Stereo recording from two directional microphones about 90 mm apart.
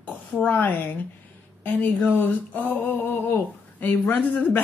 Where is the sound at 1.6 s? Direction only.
15° left (ahead or behind).